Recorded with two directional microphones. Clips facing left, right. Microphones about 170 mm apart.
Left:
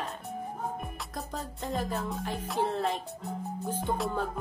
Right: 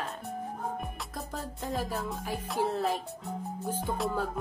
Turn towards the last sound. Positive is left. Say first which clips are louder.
# even
turn(degrees=0)  # may be behind; listen again after turning